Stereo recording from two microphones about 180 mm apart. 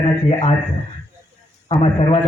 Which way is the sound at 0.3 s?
35° left (ahead or behind).